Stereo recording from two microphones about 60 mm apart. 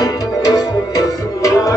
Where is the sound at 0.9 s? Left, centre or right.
Left.